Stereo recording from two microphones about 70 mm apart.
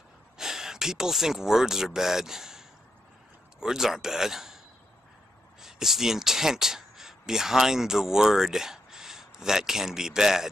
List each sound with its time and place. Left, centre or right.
0.4 s a man's voice: centre
5.6 s speech: centre